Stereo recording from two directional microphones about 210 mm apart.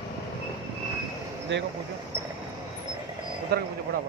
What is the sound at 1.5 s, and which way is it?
Speech, 60° right (ahead or behind).